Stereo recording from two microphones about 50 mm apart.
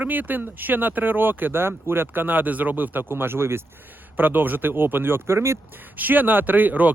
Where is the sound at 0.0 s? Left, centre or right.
Right.